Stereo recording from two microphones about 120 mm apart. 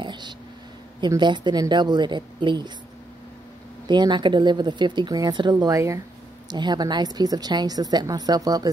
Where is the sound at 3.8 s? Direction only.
40° right (ahead or behind).